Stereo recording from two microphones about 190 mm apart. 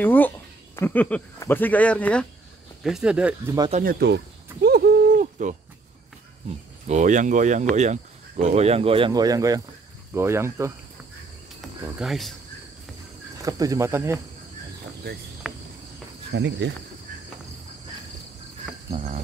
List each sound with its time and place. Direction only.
0.0 s speech: 10° left (ahead or behind)
3.8 s speech: 60° right (ahead or behind)
4.6 s a sound: 55° right (ahead or behind)
6.9 s speech: 40° right (ahead or behind); by 10.7 s 15° right (ahead or behind)
12.0 s speech: centre (ahead or behind)
13.4 s speech: 20° right (ahead or behind)
15.4 s cricket: 5° right (ahead or behind)
16.3 s speech: 65° right (ahead or behind)
18.9 s speech: 30° right (ahead or behind)